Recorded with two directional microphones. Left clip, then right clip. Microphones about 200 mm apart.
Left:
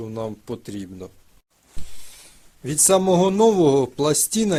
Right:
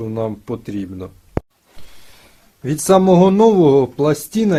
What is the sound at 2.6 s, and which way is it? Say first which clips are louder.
Speech: right 5 dB; 35° left (ahead or behind).